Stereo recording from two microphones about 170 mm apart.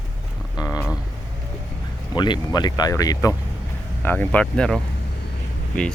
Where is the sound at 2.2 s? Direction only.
25° left (ahead or behind).